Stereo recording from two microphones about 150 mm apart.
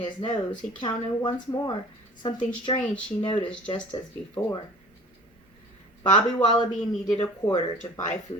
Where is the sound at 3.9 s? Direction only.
30° left (ahead or behind).